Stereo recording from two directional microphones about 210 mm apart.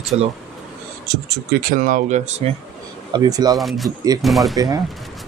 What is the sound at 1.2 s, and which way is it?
Speech, 45° right (ahead or behind).